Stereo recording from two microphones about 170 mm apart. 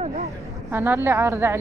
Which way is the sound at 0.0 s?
40° right (ahead or behind).